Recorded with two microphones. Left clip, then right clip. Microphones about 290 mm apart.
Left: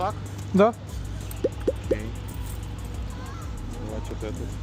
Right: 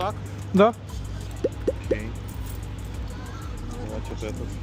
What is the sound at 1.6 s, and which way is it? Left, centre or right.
Music, centre.